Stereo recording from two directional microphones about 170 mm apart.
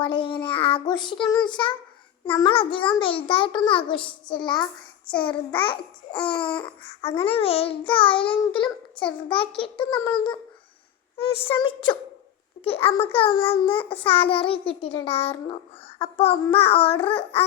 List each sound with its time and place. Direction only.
0.0 s child singing: 30° left (ahead or behind)
2.2 s a child's voice: 30° left (ahead or behind)
3.2 s child singing: 30° left (ahead or behind)
7.2 s a child's voice: 35° left (ahead or behind)
11.2 s child singing: 30° left (ahead or behind)
12.6 s a child's voice: 35° left (ahead or behind)